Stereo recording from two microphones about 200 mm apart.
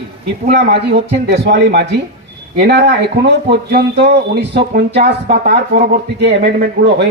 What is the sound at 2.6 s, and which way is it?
Speech, 55° right (ahead or behind).